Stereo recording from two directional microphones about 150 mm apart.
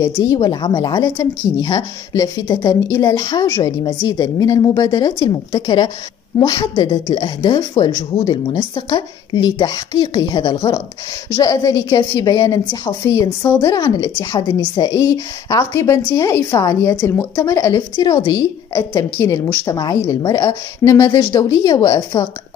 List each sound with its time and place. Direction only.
0.0 s speech: 30° left (ahead or behind)